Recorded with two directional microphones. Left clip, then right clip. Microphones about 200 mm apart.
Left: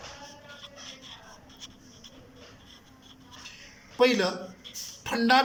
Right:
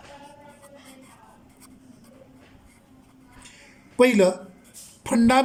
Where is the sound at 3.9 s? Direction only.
35° right (ahead or behind).